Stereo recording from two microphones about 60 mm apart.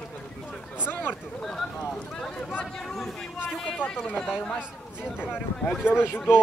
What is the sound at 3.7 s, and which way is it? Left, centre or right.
Speech, left.